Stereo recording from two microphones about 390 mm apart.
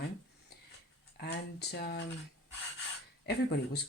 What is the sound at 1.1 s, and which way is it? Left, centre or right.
Speech, left.